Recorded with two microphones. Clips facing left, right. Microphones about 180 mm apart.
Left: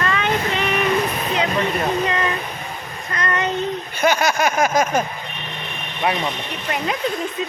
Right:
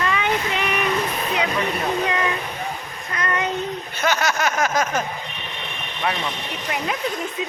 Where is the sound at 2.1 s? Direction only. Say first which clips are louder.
Left 1 dB; 10° right (ahead or behind).